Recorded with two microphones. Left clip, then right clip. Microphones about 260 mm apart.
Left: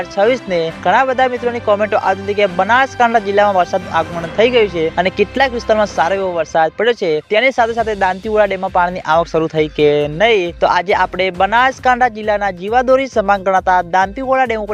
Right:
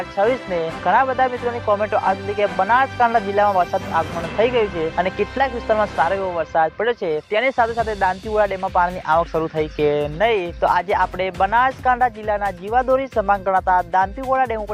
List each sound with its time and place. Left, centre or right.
0.2 s speech: left